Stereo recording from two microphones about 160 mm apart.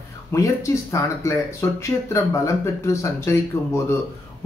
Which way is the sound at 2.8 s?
15° left (ahead or behind).